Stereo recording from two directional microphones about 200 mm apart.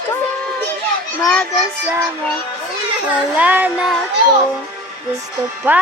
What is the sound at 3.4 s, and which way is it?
Music, 10° right (ahead or behind).